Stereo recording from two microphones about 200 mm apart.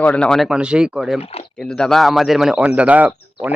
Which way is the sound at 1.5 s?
5° left (ahead or behind).